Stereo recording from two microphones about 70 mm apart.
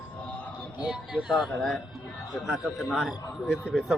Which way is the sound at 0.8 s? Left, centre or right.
Centre.